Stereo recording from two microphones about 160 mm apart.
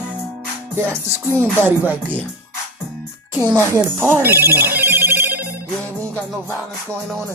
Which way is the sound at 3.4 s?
25° right (ahead or behind).